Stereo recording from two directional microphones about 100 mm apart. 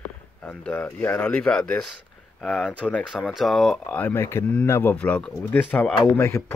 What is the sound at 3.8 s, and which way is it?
Speech, 15° left (ahead or behind).